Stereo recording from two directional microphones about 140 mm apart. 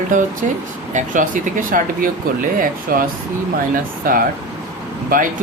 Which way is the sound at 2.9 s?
90° right.